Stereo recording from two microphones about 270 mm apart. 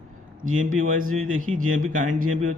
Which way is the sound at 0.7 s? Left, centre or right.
Right.